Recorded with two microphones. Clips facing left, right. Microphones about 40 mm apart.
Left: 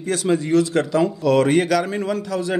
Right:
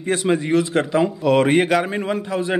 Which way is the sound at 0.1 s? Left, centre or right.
Right.